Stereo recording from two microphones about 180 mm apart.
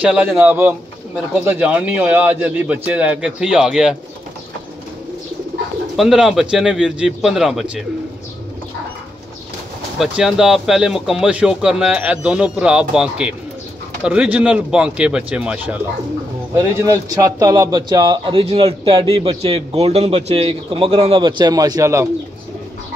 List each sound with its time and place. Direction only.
0.0 s a man's voice: 5° right (ahead or behind)
5.9 s speech: centre (ahead or behind)
9.9 s a man's voice: 5° right (ahead or behind)